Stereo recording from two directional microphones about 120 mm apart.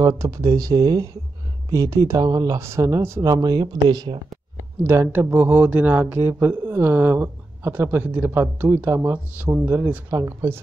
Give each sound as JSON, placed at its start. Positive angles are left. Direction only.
{"t": 0.0, "sound": "speech", "side_deg": -25}
{"t": 4.8, "sound": "speech", "side_deg": -20}